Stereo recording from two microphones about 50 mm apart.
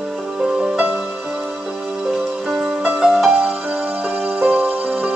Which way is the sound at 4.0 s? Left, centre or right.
Right.